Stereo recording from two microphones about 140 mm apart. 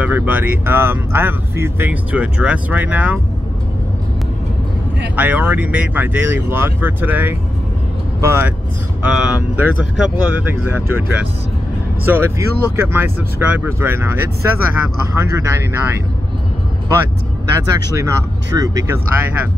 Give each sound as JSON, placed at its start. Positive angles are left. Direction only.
{"t": 0.0, "sound": "speech", "side_deg": -15}
{"t": 5.1, "sound": "speech", "side_deg": -10}
{"t": 17.6, "sound": "speech", "side_deg": -25}